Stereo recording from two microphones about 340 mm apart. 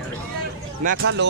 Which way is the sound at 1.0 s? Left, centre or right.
Right.